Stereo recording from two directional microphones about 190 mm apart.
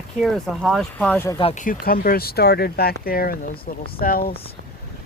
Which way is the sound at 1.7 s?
50° left (ahead or behind).